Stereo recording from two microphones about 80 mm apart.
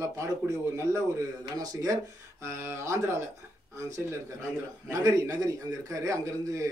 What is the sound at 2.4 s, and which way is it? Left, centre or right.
Speech, right.